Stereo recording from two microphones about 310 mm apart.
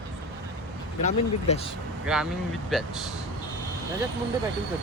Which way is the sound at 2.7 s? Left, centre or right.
Centre.